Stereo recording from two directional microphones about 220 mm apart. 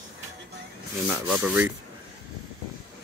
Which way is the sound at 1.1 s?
5° right (ahead or behind).